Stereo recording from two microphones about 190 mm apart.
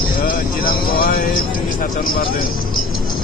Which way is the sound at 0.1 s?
50° left (ahead or behind).